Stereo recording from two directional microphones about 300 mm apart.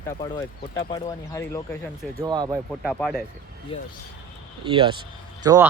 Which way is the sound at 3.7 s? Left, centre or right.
Centre.